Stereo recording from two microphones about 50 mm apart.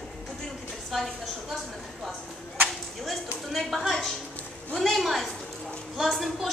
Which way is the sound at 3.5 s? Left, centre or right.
Centre.